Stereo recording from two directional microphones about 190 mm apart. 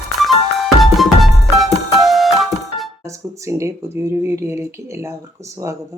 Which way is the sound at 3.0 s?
15° right (ahead or behind).